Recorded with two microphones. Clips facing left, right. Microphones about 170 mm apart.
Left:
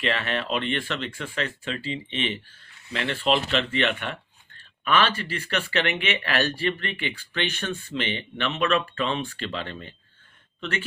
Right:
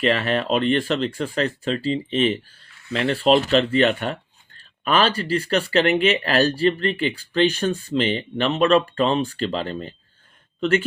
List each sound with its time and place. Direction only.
0.0 s speech: 40° right (ahead or behind)